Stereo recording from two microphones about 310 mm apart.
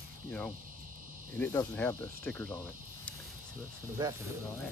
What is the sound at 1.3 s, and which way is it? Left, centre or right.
Speech, centre.